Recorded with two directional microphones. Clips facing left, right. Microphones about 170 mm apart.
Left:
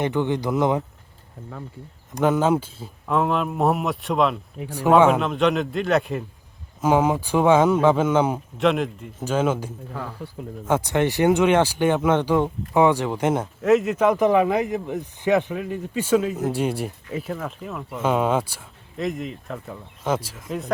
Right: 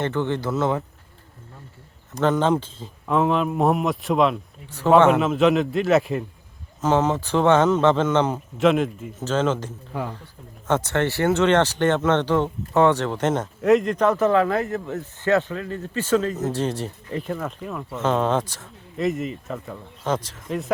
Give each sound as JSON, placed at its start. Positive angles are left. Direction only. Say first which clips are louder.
{"t": 0.0, "sound": "speech", "louder": "left 1 dB", "side_deg": 15}
{"t": 2.1, "sound": "speech", "louder": "left 1 dB", "side_deg": 10}
{"t": 6.8, "sound": "speech", "louder": "left 1 dB", "side_deg": 10}
{"t": 8.5, "sound": "speech", "louder": "right 3 dB", "side_deg": 0}
{"t": 9.1, "sound": "speech", "louder": "even", "side_deg": 10}
{"t": 9.9, "sound": "speech", "louder": "right 4 dB", "side_deg": -15}
{"t": 10.7, "sound": "speech", "louder": "left 1 dB", "side_deg": 10}
{"t": 18.9, "sound": "speech", "louder": "right 3 dB", "side_deg": 0}